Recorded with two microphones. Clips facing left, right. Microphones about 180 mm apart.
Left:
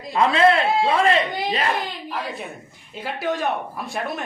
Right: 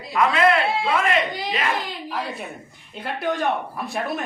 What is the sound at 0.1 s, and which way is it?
A man's voice, 30° left (ahead or behind).